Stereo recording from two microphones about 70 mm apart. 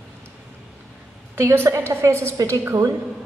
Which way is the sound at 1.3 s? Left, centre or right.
Right.